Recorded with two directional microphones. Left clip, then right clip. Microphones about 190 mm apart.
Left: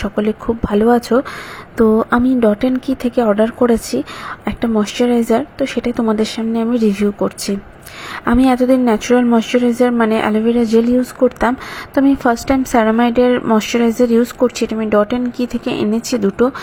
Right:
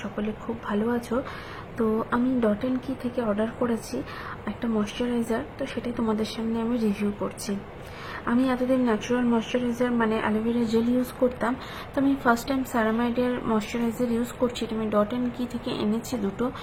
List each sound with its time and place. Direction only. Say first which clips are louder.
0.0 s a woman's voice: left 14 dB; 35° left (ahead or behind)